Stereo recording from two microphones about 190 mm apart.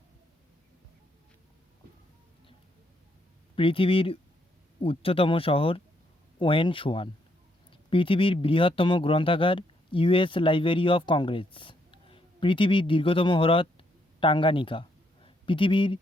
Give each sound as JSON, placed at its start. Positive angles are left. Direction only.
{"t": 3.5, "sound": "speech", "side_deg": 30}